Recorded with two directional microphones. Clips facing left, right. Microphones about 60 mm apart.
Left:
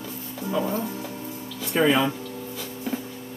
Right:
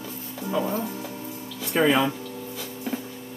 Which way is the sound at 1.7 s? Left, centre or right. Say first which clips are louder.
Even; right.